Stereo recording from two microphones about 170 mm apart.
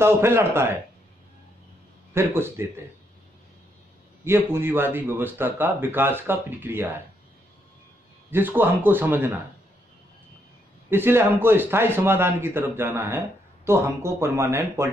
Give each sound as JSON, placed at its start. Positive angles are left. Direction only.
{"t": 0.0, "sound": "speech", "side_deg": -15}
{"t": 2.1, "sound": "speech", "side_deg": -15}
{"t": 4.2, "sound": "speech", "side_deg": -15}
{"t": 8.3, "sound": "speech", "side_deg": -10}
{"t": 10.9, "sound": "speech", "side_deg": -15}